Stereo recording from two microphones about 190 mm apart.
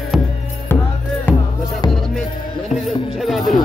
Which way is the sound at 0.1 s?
Centre (ahead or behind).